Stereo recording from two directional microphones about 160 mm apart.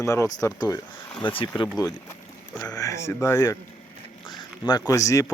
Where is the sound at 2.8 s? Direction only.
20° left (ahead or behind).